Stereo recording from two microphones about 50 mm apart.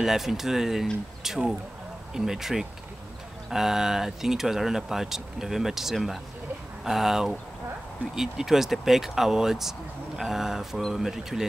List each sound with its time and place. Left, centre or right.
0.0 s speech: centre